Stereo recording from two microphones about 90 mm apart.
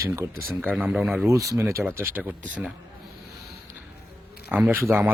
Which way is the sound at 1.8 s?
25° right (ahead or behind).